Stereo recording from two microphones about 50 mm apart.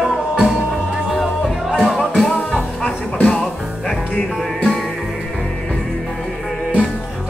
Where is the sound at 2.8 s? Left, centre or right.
Left.